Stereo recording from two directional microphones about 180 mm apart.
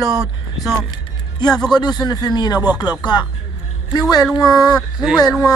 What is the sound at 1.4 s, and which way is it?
Speech, 25° left (ahead or behind).